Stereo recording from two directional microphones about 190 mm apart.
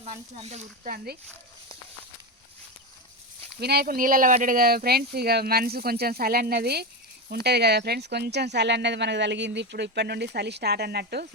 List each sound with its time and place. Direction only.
0.0 s speech: 35° right (ahead or behind); by 1.2 s 50° right (ahead or behind)
3.6 s speech: 55° right (ahead or behind)